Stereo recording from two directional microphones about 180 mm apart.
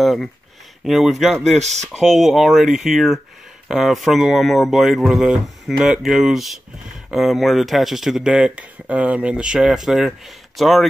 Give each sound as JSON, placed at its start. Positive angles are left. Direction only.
{"t": 0.0, "sound": "speech", "side_deg": 0}
{"t": 1.6, "sound": "speech", "side_deg": -40}
{"t": 2.0, "sound": "speech", "side_deg": 0}